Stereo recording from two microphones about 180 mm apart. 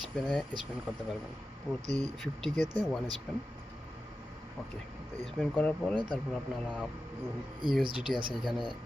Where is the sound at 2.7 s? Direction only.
5° left (ahead or behind).